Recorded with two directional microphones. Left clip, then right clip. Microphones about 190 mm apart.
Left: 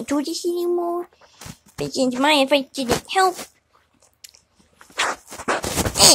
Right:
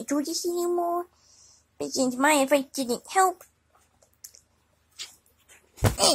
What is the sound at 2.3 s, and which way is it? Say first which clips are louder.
Speech: left 6 dB; 30° left (ahead or behind).